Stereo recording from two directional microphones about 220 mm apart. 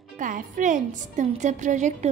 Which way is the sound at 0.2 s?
35° right (ahead or behind).